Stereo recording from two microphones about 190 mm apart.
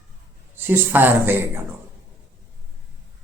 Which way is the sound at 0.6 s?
10° right (ahead or behind).